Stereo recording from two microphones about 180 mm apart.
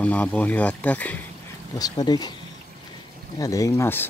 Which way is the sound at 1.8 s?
20° left (ahead or behind).